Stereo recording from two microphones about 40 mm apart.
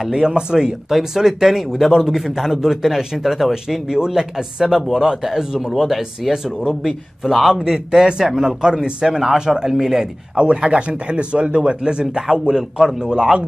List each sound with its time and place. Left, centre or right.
0.0 s a man's voice: centre
3.9 s a man's voice: centre
10.3 s a man's voice: right